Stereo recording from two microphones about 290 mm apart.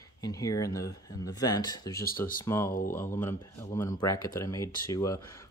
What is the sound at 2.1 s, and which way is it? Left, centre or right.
Speech, left.